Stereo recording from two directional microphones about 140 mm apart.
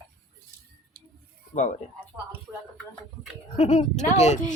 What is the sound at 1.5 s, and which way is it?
Speech, 65° left (ahead or behind).